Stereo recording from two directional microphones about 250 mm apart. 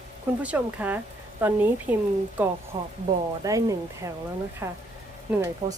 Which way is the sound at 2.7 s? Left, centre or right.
Centre.